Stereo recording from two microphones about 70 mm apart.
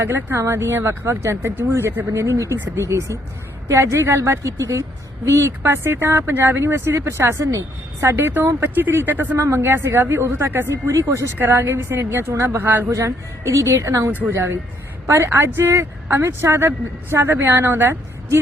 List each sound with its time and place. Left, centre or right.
0.0 s a woman's voice: right
2.1 s a woman's voice: right
12.9 s a woman's voice: right
14.1 s speech: right
15.1 s a woman's voice: right